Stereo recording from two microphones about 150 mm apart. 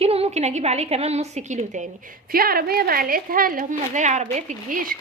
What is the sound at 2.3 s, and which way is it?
A woman's voice, 85° right.